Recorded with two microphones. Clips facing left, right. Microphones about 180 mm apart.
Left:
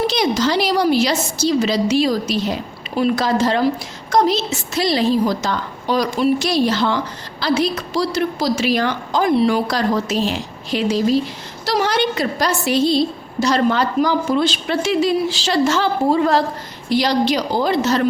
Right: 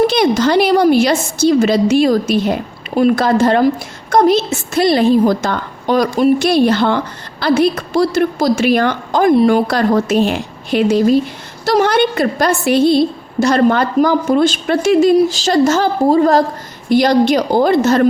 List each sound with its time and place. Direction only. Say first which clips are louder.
0.1 s a woman's voice: right 5 dB; 55° right (ahead or behind)